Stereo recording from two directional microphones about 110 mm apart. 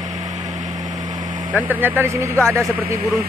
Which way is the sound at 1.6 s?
15° right (ahead or behind).